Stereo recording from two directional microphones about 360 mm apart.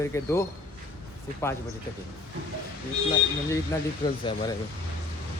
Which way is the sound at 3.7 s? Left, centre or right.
Centre.